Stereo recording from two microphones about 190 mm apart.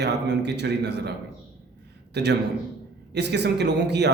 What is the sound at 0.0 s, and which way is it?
A man's voice, 65° right (ahead or behind).